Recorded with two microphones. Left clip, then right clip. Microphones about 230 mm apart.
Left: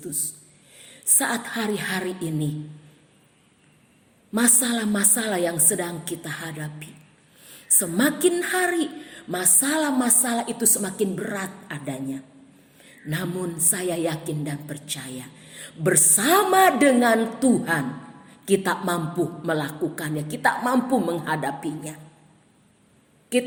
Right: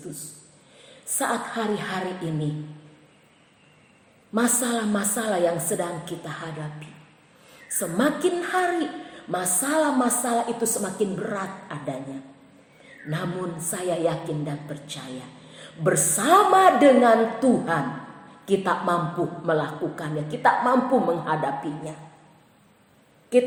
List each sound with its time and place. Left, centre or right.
0.8 s a woman's voice: left
4.4 s a woman's voice: left
13.7 s a woman's voice: left
23.3 s a woman's voice: left